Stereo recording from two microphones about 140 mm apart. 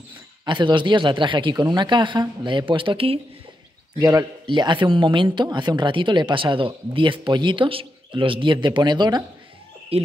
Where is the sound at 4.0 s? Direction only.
25° right (ahead or behind).